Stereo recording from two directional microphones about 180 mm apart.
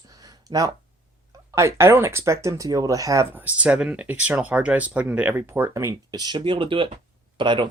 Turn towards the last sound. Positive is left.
turn(degrees=-25)  # may be behind; listen again after turning